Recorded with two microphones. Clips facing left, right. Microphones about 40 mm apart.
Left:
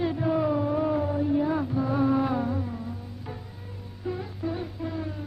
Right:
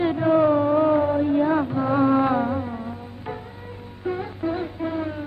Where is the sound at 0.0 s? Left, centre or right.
Right.